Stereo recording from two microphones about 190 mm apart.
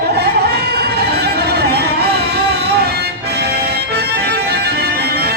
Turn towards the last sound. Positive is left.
turn(degrees=-60)  # may be behind; listen again after turning